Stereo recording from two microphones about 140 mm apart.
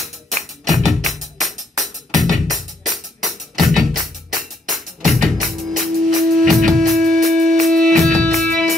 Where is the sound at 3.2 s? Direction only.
Centre (ahead or behind).